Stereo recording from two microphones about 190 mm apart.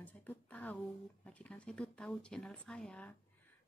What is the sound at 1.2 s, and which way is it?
A woman's voice, 5° left (ahead or behind).